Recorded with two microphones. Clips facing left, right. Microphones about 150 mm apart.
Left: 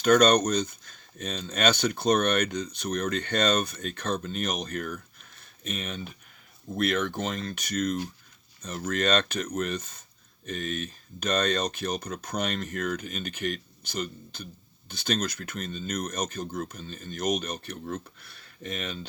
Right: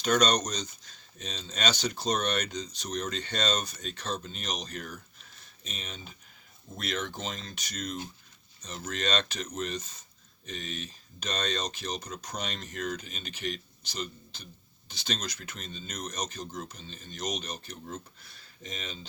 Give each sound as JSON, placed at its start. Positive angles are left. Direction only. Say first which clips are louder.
{"t": 0.0, "sound": "speech", "louder": "left 6 dB", "side_deg": 55}